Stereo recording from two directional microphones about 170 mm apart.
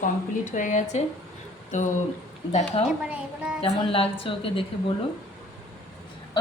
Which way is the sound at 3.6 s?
35° left (ahead or behind).